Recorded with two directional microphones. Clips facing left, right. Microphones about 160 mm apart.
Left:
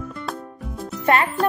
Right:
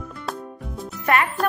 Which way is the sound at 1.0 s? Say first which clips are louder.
Left 2 dB; 30° left (ahead or behind).